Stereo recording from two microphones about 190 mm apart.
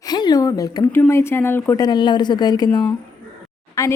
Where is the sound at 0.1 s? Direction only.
20° left (ahead or behind).